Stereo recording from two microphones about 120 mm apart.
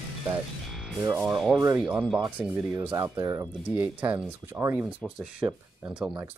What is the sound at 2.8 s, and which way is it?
Speech, 20° right (ahead or behind).